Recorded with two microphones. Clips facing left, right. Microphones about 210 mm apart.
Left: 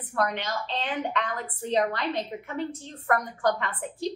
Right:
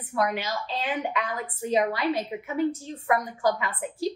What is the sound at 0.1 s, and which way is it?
A woman's voice, 5° right (ahead or behind).